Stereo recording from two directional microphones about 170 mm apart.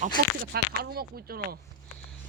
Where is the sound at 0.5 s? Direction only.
65° right (ahead or behind).